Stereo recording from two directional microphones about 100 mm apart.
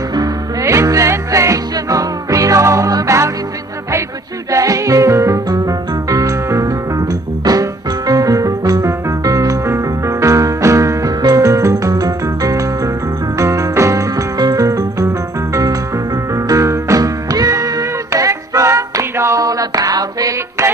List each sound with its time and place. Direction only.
0.6 s music: 30° right (ahead or behind)
4.5 s music: 35° right (ahead or behind)